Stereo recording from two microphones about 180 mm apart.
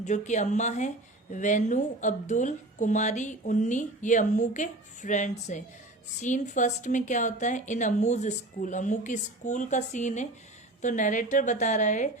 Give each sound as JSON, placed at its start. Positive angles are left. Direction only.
{"t": 0.0, "sound": "speech", "side_deg": 40}